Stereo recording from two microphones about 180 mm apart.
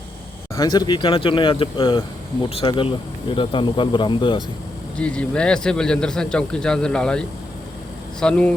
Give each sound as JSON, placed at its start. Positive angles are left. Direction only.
{"t": 0.5, "sound": "speech", "side_deg": 20}
{"t": 4.9, "sound": "a man's voice", "side_deg": 5}